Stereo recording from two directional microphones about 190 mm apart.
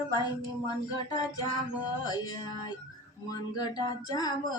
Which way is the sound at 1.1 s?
20° left (ahead or behind).